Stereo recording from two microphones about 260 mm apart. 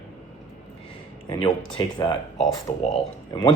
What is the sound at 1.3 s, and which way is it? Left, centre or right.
Speech, centre.